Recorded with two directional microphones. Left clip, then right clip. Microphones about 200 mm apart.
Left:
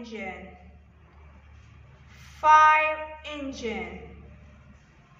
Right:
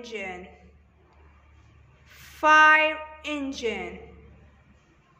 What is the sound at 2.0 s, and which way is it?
Speech, 60° right (ahead or behind).